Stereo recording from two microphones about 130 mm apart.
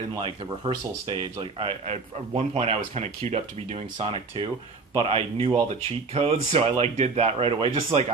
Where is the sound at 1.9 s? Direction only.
50° right (ahead or behind).